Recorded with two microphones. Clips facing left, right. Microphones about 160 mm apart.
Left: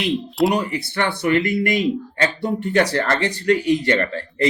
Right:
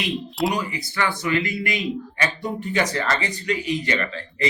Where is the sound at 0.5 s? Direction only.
65° left (ahead or behind).